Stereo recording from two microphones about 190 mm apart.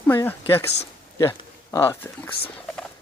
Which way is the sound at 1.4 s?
15° left (ahead or behind).